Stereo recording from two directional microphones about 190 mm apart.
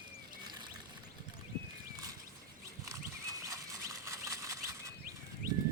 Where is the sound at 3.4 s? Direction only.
15° right (ahead or behind).